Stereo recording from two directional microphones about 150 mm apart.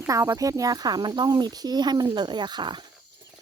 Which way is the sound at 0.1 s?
20° right (ahead or behind).